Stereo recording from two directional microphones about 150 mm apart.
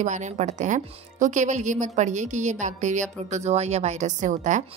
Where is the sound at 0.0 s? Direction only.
55° right (ahead or behind).